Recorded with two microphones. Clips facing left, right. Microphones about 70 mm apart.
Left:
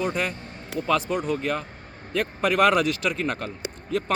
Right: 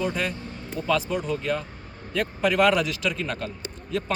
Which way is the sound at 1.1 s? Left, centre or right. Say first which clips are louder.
Left 1 dB; left.